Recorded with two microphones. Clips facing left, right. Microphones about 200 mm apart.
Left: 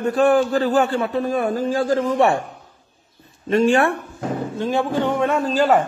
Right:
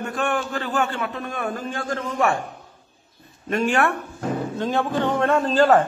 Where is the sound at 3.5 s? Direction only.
30° left (ahead or behind).